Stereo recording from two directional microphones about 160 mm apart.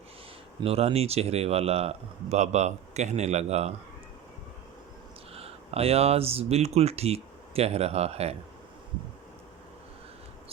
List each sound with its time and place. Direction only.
0.6 s speech: 40° right (ahead or behind)
5.3 s speech: 40° right (ahead or behind)